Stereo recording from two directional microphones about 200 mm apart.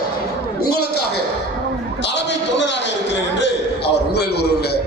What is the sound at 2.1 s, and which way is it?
Music, 65° left (ahead or behind).